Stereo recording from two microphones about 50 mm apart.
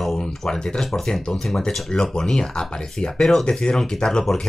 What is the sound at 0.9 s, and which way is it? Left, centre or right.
Speech, centre.